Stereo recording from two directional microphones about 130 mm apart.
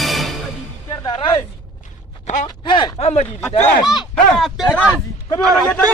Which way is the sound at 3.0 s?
55° left (ahead or behind).